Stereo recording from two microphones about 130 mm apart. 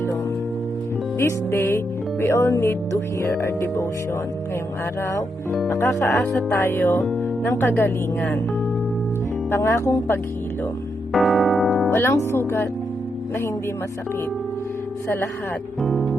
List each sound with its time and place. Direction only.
1.2 s speech: 20° left (ahead or behind)
5.7 s speech: 25° left (ahead or behind)
9.5 s speech: 20° left (ahead or behind)
11.1 s music: centre (ahead or behind)
11.9 s speech: 20° left (ahead or behind)
15.8 s music: centre (ahead or behind)